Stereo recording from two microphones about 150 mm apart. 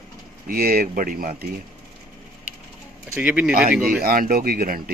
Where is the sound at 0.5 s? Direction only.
85° right; by 1.5 s 70° right (ahead or behind).